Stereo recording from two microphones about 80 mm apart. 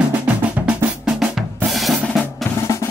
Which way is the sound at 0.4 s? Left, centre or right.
Right.